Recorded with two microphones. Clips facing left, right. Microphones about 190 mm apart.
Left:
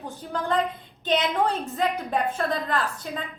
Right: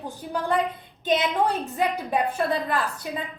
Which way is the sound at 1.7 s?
10° right (ahead or behind).